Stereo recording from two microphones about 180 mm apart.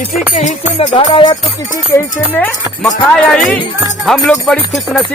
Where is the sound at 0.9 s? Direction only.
25° left (ahead or behind).